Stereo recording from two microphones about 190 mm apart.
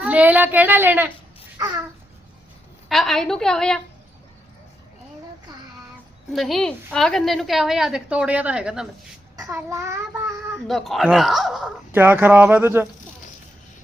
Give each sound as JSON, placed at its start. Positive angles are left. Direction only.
{"t": 0.0, "sound": "child singing", "side_deg": -10}
{"t": 2.9, "sound": "a woman's voice", "side_deg": 0}
{"t": 6.3, "sound": "a woman's voice", "side_deg": 0}
{"t": 9.3, "sound": "a child's voice", "side_deg": -15}
{"t": 10.7, "sound": "a woman's voice", "side_deg": 0}
{"t": 11.9, "sound": "child singing", "side_deg": -10}